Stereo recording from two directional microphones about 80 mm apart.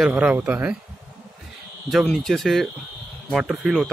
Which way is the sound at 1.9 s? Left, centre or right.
Centre.